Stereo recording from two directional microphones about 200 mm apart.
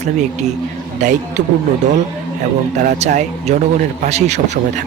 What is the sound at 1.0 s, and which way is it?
Speech, 35° right (ahead or behind).